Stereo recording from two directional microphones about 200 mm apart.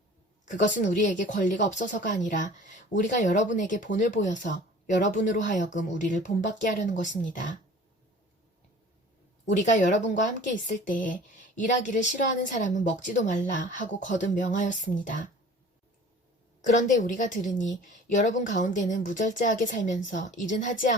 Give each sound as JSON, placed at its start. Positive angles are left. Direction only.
{"t": 0.6, "sound": "a woman's voice", "side_deg": 40}
{"t": 9.5, "sound": "a woman's voice", "side_deg": 40}
{"t": 16.6, "sound": "a woman's voice", "side_deg": 40}